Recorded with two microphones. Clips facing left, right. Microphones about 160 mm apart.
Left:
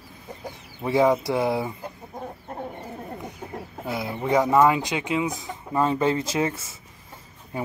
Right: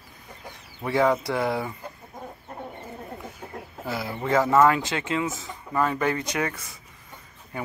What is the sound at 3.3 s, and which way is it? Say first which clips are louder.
Chicken: left 3 dB; 25° left (ahead or behind).